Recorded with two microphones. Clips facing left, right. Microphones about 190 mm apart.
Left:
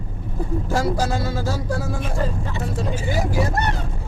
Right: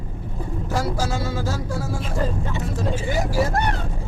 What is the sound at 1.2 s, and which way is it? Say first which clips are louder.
Music: left 1 dB; 10° left (ahead or behind).